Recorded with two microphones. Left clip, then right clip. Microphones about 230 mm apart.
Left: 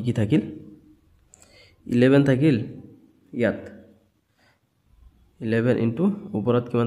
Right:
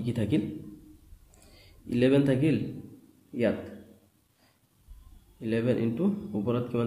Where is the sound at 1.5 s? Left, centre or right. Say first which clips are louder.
Left 7 dB; left.